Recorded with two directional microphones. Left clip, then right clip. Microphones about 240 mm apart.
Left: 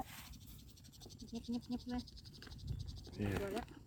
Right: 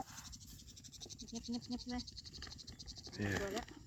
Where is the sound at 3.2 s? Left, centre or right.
Centre.